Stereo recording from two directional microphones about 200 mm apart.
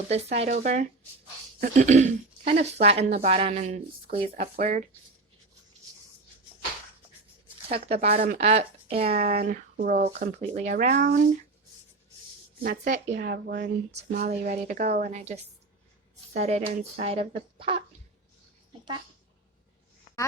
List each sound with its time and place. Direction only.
0.1 s speech: 30° right (ahead or behind)
4.5 s speech: 40° right (ahead or behind)
7.7 s speech: 30° right (ahead or behind)
12.6 s a woman's voice: 40° right (ahead or behind)
13.1 s speech: 55° right (ahead or behind)
14.1 s speech: 45° right (ahead or behind); by 17.8 s 25° right (ahead or behind)